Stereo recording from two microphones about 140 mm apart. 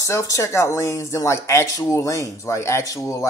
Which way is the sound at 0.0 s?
20° left (ahead or behind).